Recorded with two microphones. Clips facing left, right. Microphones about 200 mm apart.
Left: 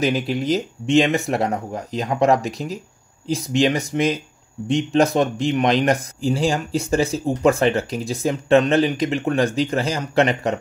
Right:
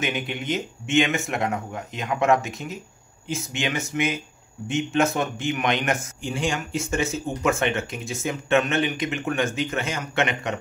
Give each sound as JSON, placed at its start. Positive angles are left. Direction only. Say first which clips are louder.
{"t": 0.0, "sound": "a man's voice", "louder": "left 7 dB", "side_deg": 35}